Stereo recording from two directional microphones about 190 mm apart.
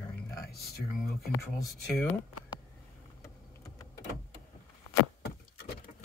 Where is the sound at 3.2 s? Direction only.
20° left (ahead or behind).